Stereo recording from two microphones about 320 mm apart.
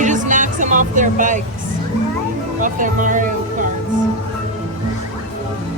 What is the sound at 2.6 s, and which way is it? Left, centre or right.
Speech, right.